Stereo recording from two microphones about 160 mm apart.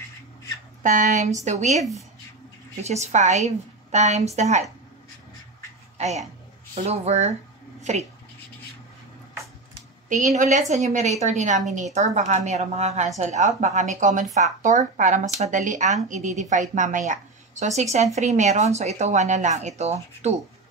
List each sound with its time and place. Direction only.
0.8 s speech: 50° right (ahead or behind)
2.8 s speech: 45° right (ahead or behind)
5.9 s speech: 45° right (ahead or behind)
10.0 s a woman's voice: 50° right (ahead or behind)